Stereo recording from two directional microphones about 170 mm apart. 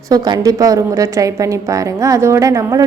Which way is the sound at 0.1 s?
20° right (ahead or behind).